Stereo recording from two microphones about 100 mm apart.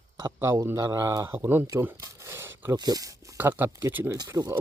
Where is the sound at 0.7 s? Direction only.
35° right (ahead or behind).